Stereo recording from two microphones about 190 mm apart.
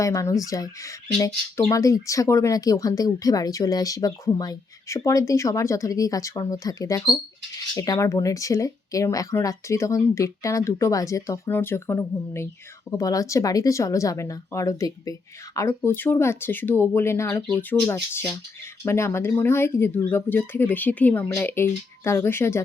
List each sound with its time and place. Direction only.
0.0 s speech: 15° left (ahead or behind)